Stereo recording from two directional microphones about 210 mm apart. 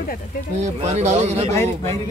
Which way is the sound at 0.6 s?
30° right (ahead or behind).